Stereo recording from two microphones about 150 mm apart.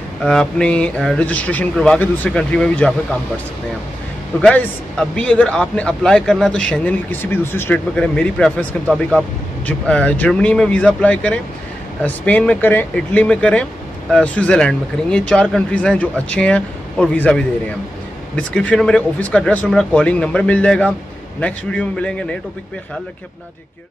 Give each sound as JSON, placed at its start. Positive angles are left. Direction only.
{"t": 0.2, "sound": "speech", "side_deg": 5}
{"t": 4.4, "sound": "speech", "side_deg": 10}